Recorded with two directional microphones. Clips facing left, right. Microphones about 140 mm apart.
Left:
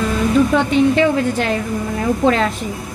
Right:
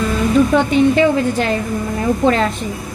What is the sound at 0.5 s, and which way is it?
A woman's voice, centre (ahead or behind).